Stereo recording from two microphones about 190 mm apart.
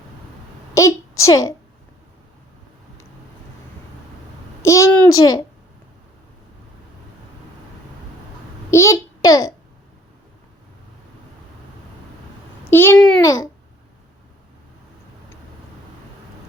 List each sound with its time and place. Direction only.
0.7 s a sound: 15° left (ahead or behind)
1.2 s a child's voice: 15° left (ahead or behind)
4.6 s a sound: 15° left (ahead or behind)
8.7 s a child's voice: 15° left (ahead or behind)
12.7 s a child's voice: 10° left (ahead or behind)
13.2 s a child's voice: 15° left (ahead or behind)